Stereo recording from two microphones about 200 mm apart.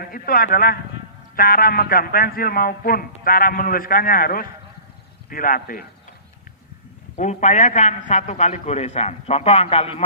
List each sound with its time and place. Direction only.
0.0 s a man's voice: 45° left (ahead or behind)
7.2 s a man's voice: 35° left (ahead or behind)